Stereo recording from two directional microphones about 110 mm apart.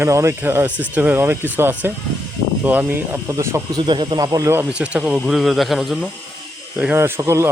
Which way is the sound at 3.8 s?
45° right (ahead or behind).